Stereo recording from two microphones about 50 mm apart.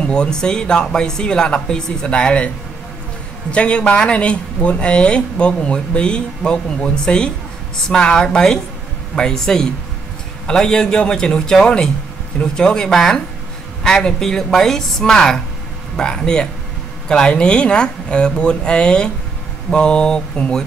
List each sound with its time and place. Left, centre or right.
0.0 s speech: centre
3.5 s speech: left